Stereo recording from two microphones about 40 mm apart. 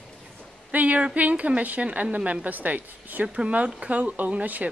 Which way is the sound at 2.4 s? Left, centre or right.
Right.